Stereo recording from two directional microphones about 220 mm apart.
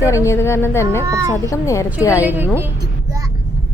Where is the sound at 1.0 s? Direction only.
15° right (ahead or behind).